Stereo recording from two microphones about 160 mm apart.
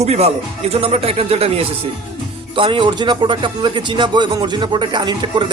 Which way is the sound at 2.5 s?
30° right (ahead or behind).